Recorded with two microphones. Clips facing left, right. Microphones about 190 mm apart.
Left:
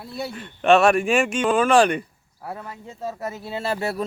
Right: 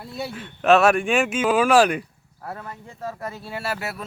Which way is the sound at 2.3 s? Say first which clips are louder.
Left 1 dB; 10° left (ahead or behind).